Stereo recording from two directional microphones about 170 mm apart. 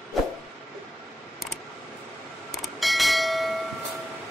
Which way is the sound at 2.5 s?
Centre (ahead or behind).